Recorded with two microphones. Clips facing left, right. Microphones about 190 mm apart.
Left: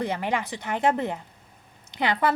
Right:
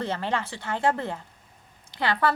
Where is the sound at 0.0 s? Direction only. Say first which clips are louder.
Left 1 dB; 15° left (ahead or behind).